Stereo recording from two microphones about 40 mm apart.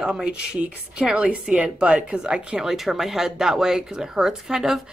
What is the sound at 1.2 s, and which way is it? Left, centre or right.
Speech, right.